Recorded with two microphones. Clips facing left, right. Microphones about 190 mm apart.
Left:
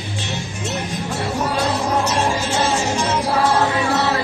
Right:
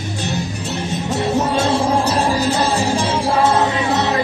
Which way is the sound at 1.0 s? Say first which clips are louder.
Right 6 dB; 25° right (ahead or behind).